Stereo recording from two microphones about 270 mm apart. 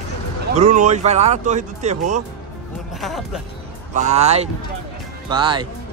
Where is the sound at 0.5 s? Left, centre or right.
Right.